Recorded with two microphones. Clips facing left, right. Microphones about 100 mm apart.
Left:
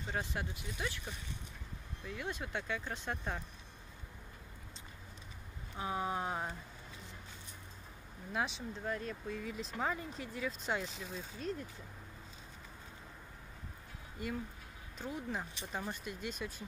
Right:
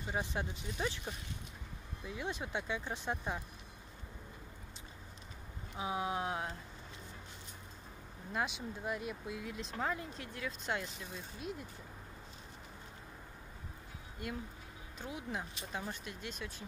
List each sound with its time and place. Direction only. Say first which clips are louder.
0.0 s speech: right 1 dB; 15° right (ahead or behind)
5.8 s speech: even; 5° right (ahead or behind)
8.3 s speech: even; centre (ahead or behind)
8.8 s speech: even; 10° right (ahead or behind)
14.2 s speech: left 2 dB; centre (ahead or behind)